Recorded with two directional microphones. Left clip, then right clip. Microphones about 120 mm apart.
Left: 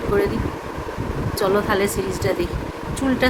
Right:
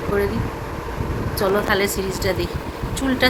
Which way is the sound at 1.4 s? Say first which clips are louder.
Even; 15° left (ahead or behind).